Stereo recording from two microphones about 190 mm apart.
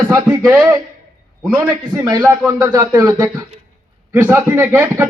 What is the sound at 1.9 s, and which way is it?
A man's voice, 20° right (ahead or behind).